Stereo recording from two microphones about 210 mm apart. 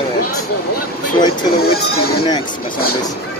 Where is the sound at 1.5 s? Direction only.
50° left (ahead or behind).